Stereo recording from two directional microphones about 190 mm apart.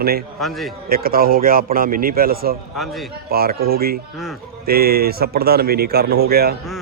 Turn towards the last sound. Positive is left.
turn(degrees=-55)  # may be behind; listen again after turning